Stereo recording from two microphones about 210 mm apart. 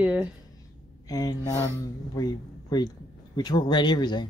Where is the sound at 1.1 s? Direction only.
20° left (ahead or behind).